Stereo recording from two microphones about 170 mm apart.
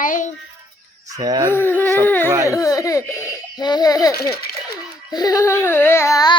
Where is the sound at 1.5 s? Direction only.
10° left (ahead or behind).